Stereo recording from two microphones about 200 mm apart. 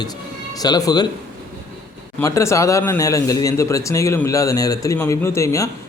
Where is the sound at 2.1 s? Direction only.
15° left (ahead or behind).